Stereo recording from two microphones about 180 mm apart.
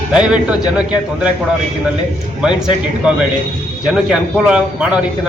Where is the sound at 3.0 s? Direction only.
5° right (ahead or behind).